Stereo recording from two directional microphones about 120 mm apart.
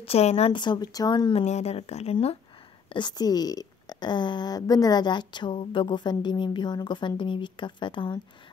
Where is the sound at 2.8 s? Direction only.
40° left (ahead or behind).